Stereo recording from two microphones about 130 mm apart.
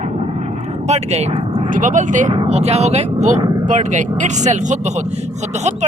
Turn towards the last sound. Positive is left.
turn(degrees=-60)  # may be behind; listen again after turning